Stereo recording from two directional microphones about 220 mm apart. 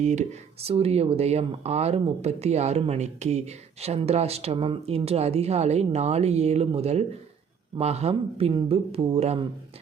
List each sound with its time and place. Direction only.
0.0 s speech: 30° right (ahead or behind)